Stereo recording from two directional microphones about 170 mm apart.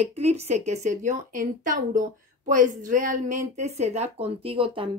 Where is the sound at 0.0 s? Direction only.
40° right (ahead or behind).